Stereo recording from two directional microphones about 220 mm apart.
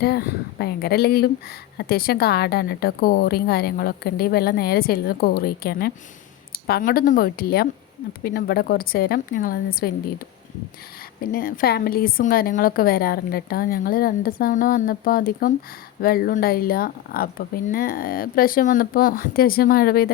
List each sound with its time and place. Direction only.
0.0 s a woman's voice: 45° left (ahead or behind)
11.2 s a woman's voice: 40° left (ahead or behind)